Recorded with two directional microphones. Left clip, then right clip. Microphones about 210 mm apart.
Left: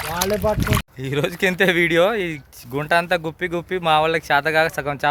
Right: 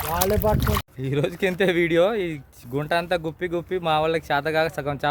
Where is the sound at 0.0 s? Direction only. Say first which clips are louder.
Left 1 dB; 60° right (ahead or behind).